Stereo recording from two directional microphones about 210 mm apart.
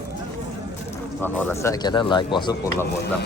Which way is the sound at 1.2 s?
10° left (ahead or behind).